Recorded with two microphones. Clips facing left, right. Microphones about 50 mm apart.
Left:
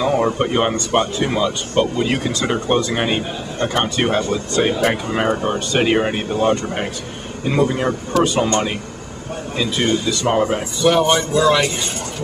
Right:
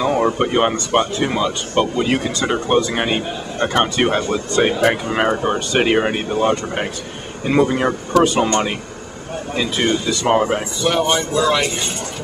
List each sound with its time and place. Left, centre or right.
0.0 s a man's voice: centre; by 8.5 s right
9.6 s a man's voice: centre
10.8 s speech: centre